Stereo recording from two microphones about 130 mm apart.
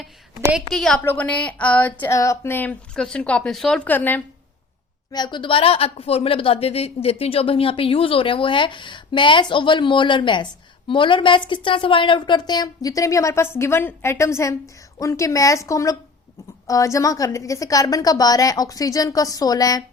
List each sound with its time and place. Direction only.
0.7 s a woman's voice: centre (ahead or behind)
2.1 s a woman's voice: 25° left (ahead or behind)
5.1 s a woman's voice: 35° left (ahead or behind)